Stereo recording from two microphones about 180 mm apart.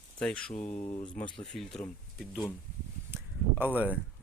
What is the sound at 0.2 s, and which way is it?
Speech, 5° left (ahead or behind).